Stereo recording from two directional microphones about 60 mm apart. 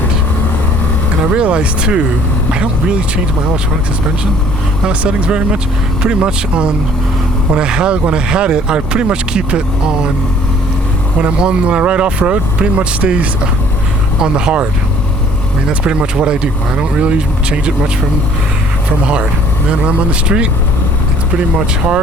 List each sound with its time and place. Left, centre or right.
1.3 s speech: centre
4.9 s speech: centre
11.2 s speech: centre
15.8 s speech: centre
19.8 s speech: centre